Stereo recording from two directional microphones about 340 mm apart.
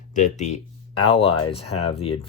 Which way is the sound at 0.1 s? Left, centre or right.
Left.